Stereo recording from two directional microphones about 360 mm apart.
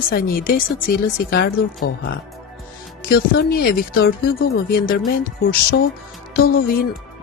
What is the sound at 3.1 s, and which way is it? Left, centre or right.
Speech, left.